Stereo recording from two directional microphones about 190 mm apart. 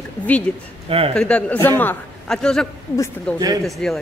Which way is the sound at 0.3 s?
10° left (ahead or behind).